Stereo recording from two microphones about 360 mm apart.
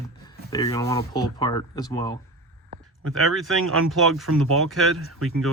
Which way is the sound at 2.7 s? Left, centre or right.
Right.